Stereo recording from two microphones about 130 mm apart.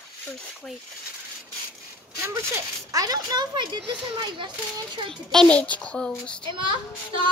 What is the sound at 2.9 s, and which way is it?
Speech, 30° right (ahead or behind).